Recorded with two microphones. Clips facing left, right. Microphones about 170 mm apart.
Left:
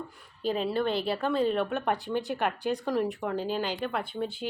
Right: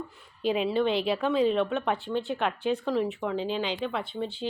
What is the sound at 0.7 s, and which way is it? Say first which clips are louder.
A woman's voice: right 3 dB; 5° left (ahead or behind).